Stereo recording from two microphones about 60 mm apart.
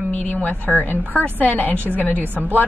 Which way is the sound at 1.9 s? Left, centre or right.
Left.